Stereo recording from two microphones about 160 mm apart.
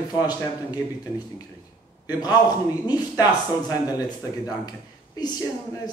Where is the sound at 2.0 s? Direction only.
25° left (ahead or behind).